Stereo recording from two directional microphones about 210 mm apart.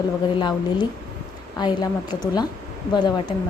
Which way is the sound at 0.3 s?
20° left (ahead or behind).